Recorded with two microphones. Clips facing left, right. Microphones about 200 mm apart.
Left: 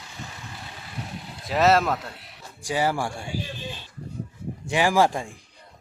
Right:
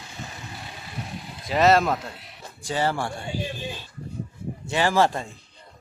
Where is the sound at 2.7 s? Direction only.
10° left (ahead or behind).